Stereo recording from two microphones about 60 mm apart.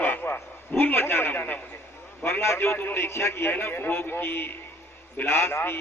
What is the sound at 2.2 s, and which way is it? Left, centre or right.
A man's voice, left.